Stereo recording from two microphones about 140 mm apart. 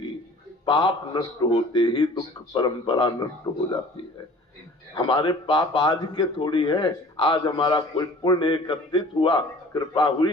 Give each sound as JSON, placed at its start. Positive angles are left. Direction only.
{"t": 0.6, "sound": "a man's voice", "side_deg": 35}
{"t": 4.9, "sound": "speech", "side_deg": 35}